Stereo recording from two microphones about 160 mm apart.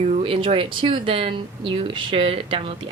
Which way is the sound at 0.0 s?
40° right (ahead or behind).